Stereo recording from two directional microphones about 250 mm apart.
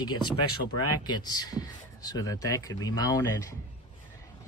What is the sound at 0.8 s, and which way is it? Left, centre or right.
A man's voice, centre.